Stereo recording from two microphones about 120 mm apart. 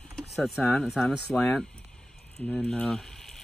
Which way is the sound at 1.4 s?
10° left (ahead or behind).